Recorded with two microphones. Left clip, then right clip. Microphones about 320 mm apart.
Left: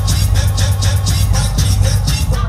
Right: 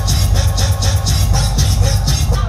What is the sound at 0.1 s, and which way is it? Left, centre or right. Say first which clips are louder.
Music: right 1 dB; centre.